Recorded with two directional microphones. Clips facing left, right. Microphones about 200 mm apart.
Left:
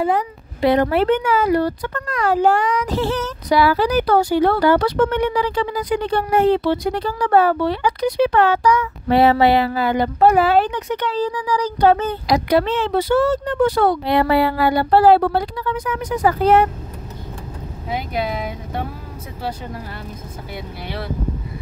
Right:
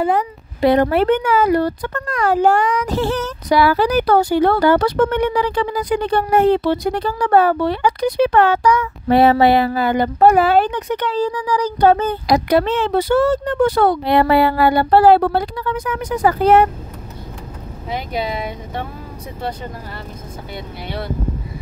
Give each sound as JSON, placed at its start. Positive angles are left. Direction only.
{"t": 0.1, "sound": "speech", "side_deg": -45}
{"t": 17.8, "sound": "speech", "side_deg": 5}